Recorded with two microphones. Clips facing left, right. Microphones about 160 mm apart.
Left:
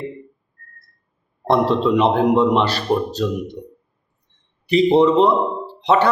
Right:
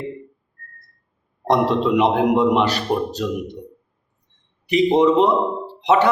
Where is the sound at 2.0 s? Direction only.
15° right (ahead or behind).